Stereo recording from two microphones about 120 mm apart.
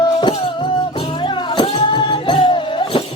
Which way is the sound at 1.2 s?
40° left (ahead or behind).